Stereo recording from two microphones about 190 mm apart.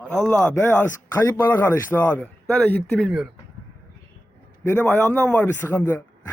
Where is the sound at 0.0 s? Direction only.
5° left (ahead or behind).